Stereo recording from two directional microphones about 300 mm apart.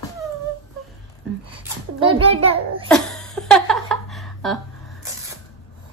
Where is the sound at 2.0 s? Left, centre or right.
Centre.